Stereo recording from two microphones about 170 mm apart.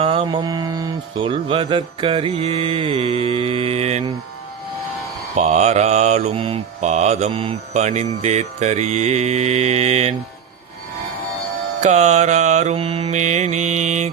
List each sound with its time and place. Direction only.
0.0 s mantra: 30° right (ahead or behind)
5.4 s mantra: 45° right (ahead or behind)
11.8 s mantra: 45° right (ahead or behind)